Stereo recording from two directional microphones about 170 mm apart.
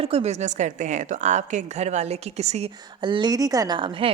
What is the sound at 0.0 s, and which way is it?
Speech, 35° right (ahead or behind).